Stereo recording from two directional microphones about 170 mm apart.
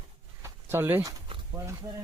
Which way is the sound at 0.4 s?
15° right (ahead or behind).